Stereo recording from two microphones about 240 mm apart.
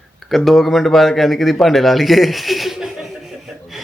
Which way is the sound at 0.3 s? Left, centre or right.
Centre.